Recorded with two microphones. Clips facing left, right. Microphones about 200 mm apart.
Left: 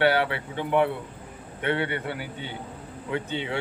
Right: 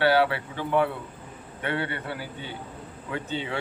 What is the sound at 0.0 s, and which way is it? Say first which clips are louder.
Speech: right 1 dB; 20° left (ahead or behind).